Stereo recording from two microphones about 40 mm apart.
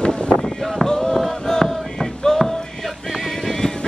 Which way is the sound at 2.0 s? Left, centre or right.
Centre.